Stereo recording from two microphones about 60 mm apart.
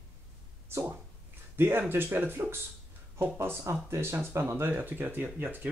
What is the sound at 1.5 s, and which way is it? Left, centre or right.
Speech, right.